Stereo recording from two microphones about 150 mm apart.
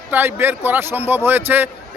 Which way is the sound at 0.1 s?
15° right (ahead or behind).